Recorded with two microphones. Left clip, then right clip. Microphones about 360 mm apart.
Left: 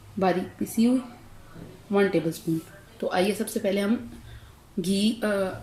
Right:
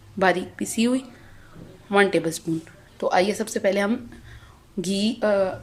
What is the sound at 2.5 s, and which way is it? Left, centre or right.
Speech, right.